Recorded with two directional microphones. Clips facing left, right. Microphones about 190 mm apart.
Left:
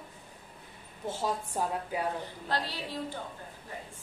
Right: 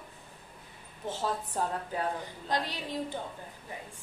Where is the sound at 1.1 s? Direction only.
10° left (ahead or behind).